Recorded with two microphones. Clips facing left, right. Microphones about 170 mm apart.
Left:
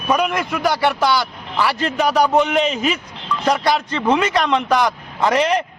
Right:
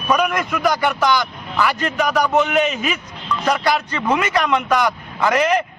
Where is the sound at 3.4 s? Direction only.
30° left (ahead or behind).